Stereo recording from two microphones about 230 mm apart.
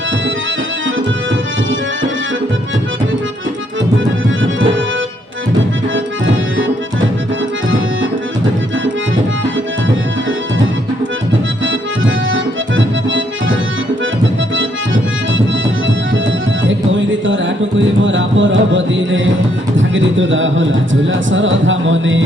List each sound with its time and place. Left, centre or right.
5.9 s accordion: right
11.6 s accordion: right
18.0 s a sound: right